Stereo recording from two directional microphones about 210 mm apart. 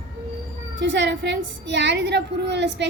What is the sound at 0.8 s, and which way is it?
Speech, 55° right (ahead or behind).